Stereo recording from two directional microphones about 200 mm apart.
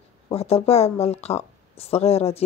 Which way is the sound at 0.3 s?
30° left (ahead or behind).